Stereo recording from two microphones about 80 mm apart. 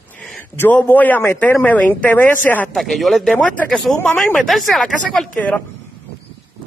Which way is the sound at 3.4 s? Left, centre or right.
Centre.